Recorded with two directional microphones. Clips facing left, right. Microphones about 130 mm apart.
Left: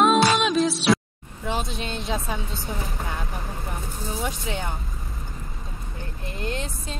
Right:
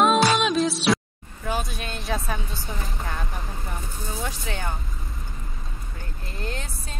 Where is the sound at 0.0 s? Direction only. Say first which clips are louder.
Left 1 dB; centre (ahead or behind).